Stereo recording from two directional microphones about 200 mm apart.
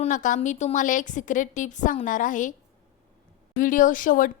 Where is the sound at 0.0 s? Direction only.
40° left (ahead or behind).